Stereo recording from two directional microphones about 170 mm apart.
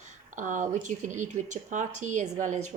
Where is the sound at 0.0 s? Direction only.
50° right (ahead or behind).